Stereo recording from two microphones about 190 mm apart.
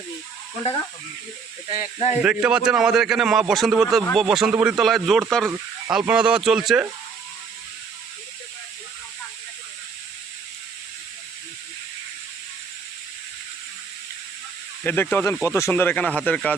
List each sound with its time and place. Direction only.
1.8 s speech: 35° left (ahead or behind)
2.2 s a man's voice: 5° right (ahead or behind)
14.8 s speech: 10° left (ahead or behind)